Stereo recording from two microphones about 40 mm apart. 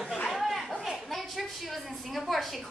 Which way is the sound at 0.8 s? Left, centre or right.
Centre.